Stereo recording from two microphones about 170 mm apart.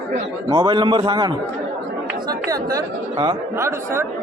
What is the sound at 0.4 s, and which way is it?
Speech, 25° right (ahead or behind).